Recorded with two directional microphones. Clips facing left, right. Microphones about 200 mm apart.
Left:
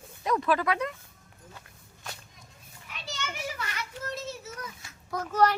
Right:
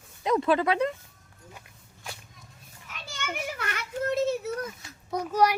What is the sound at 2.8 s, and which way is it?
Children playing, 50° right (ahead or behind).